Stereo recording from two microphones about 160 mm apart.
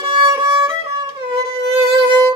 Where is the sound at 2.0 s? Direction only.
30° right (ahead or behind).